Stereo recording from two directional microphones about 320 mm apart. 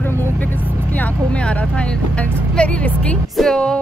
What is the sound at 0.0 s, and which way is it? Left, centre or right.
Vehicle, centre.